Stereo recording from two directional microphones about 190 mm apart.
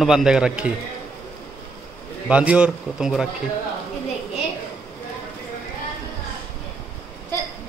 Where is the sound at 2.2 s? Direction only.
5° right (ahead or behind).